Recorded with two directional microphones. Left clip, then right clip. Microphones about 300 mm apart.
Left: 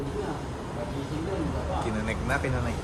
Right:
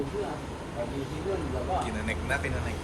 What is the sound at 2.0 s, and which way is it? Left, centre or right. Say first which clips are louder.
Speech: left 2 dB; centre.